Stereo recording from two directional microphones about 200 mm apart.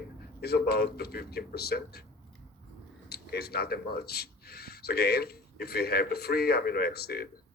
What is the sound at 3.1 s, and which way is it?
Speech, 55° left (ahead or behind).